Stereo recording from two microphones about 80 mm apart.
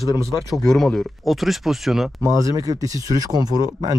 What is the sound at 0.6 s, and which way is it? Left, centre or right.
Speech, centre.